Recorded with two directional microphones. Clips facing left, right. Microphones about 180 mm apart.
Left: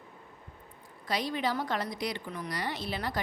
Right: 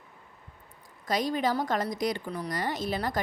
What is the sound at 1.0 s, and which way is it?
A woman's voice, 45° right (ahead or behind).